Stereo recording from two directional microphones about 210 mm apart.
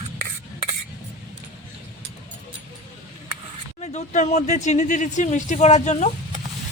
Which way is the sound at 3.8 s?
30° left (ahead or behind).